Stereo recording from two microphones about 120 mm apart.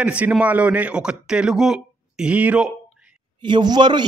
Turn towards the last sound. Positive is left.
turn(degrees=-40)  # may be behind; listen again after turning